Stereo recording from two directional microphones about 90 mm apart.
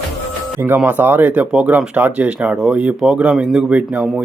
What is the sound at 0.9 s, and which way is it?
Speech, 20° right (ahead or behind).